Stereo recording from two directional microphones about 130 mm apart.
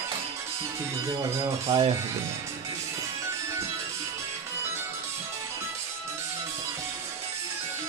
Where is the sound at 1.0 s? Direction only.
30° right (ahead or behind).